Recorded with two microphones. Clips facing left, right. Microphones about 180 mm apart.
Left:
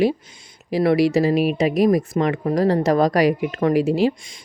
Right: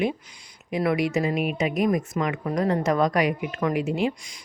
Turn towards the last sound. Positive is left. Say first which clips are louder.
# left 6 dB
turn(degrees=30)  # may be behind; listen again after turning